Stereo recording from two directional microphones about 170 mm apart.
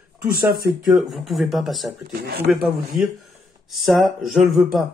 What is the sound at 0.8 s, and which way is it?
Speech, centre (ahead or behind).